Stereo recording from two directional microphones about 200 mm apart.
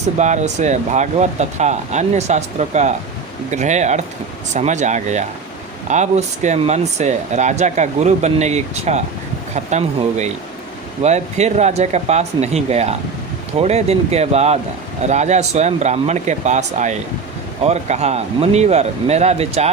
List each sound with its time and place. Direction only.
0.2 s speech: 35° right (ahead or behind)